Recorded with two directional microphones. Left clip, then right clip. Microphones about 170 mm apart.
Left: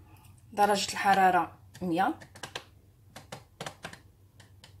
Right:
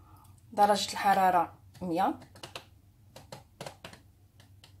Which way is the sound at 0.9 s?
15° right (ahead or behind).